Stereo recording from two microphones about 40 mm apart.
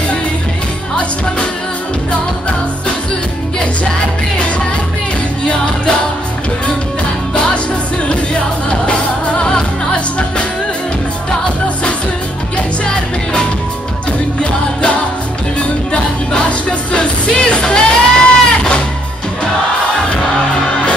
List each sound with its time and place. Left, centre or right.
5.4 s music: left
7.3 s music: left
12.5 s music: left
16.4 s music: left